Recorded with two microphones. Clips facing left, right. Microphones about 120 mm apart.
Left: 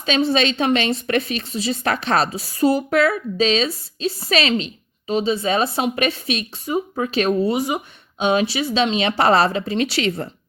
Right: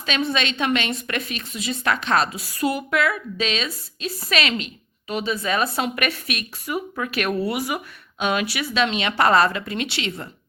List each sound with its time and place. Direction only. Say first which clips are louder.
0.0 s a woman's voice: left 6 dB; 30° left (ahead or behind)